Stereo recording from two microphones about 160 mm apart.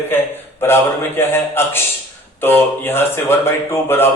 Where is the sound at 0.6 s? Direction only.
15° left (ahead or behind).